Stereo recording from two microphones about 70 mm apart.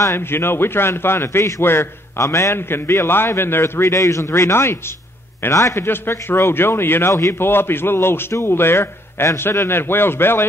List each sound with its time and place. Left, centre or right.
0.0 s a man's voice: left
2.5 s a man's voice: left
5.5 s a man's voice: left
5.9 s a man's voice: left